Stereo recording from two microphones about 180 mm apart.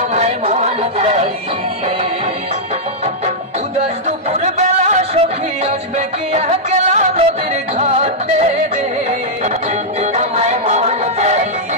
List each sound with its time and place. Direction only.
0.1 s a sound: 35° right (ahead or behind)
4.3 s music: 40° right (ahead or behind)
10.1 s music: 40° right (ahead or behind)